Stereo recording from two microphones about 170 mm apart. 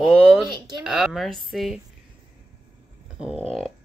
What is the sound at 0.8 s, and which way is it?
Speech, centre (ahead or behind).